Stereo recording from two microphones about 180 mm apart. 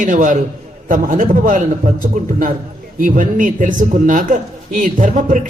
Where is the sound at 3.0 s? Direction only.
50° right (ahead or behind).